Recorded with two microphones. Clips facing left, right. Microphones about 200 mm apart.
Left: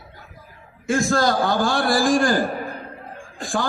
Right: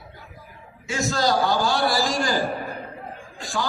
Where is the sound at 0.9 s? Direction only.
50° left (ahead or behind).